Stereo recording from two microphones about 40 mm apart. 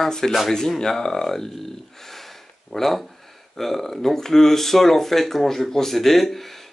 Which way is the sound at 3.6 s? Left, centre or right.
Centre.